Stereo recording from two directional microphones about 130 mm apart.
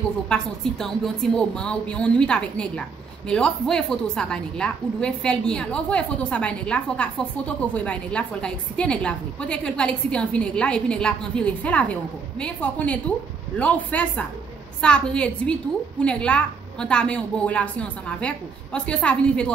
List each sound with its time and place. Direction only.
0.3 s a woman's voice: 5° left (ahead or behind)